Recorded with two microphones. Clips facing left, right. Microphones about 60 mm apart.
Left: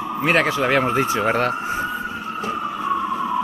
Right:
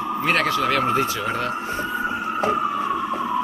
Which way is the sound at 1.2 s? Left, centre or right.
Left.